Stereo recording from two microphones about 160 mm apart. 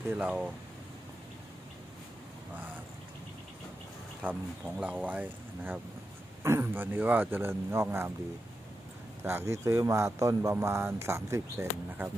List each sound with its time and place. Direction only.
0.1 s speech: 5° right (ahead or behind)
4.2 s speech: 10° right (ahead or behind)
9.2 s speech: 15° right (ahead or behind)